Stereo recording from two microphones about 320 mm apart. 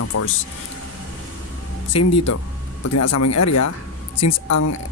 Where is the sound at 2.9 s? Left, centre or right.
Left.